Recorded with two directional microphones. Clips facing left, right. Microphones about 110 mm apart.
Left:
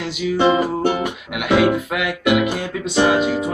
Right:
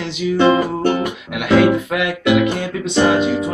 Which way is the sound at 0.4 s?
10° left (ahead or behind).